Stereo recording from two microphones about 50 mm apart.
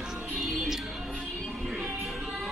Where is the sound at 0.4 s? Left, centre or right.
Centre.